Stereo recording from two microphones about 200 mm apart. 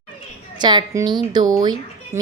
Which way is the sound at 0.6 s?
20° right (ahead or behind).